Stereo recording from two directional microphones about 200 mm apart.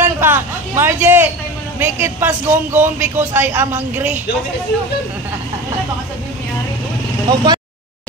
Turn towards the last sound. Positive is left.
turn(degrees=-20)  # may be behind; listen again after turning